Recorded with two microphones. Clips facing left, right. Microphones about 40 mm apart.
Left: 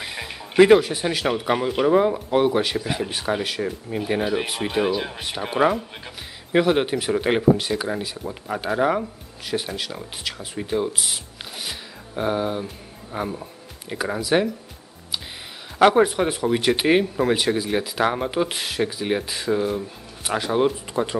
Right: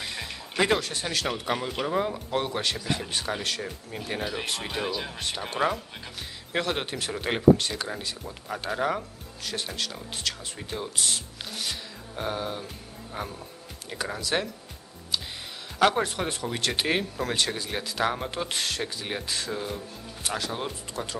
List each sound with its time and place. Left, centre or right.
0.0 s speech: centre
15.8 s speech: centre